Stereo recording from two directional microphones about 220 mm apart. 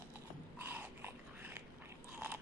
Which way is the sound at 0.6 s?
10° right (ahead or behind).